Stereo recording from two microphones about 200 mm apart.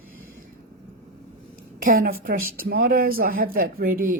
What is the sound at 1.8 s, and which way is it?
Speech, 45° right (ahead or behind).